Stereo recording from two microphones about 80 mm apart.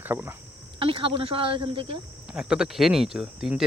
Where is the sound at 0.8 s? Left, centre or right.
Right.